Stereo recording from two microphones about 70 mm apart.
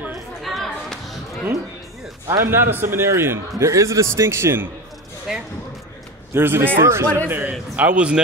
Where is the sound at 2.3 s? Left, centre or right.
Right.